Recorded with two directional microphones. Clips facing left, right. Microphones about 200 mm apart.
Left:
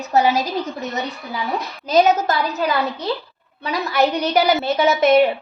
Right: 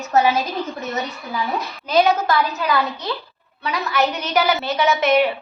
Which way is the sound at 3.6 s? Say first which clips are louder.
Left 2 dB; 35° left (ahead or behind).